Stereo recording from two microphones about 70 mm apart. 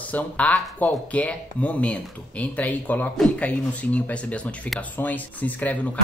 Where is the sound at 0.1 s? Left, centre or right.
Left.